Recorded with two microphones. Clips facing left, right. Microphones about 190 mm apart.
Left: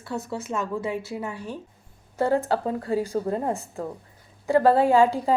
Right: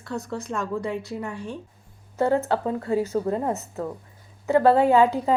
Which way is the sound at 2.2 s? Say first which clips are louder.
Right 1 dB; 35° left (ahead or behind).